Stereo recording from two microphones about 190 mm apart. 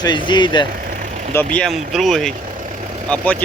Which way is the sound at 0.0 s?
25° left (ahead or behind).